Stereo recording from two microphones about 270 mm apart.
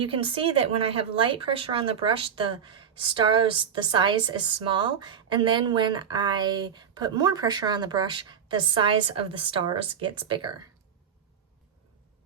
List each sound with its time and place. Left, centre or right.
0.0 s a woman's voice: centre